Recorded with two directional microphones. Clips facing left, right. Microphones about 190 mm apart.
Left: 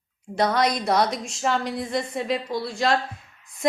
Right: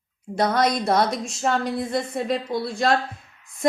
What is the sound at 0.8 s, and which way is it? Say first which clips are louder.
Speech: right 1 dB; 25° right (ahead or behind).